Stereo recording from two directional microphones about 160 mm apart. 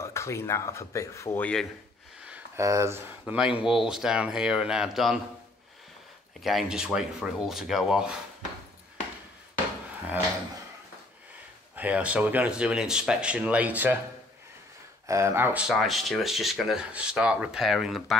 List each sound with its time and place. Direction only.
0.0 s speech: 15° left (ahead or behind)
2.2 s a sound: 10° right (ahead or behind)
2.6 s speech: 20° right (ahead or behind); by 5.2 s centre (ahead or behind)
6.4 s speech: 5° right (ahead or behind)
11.7 s speech: 10° right (ahead or behind)
15.0 s speech: 20° right (ahead or behind); by 18.1 s centre (ahead or behind)